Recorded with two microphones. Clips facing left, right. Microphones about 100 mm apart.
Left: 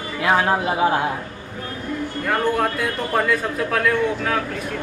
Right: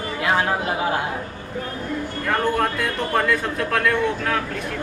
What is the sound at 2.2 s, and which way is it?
A man's voice, centre (ahead or behind).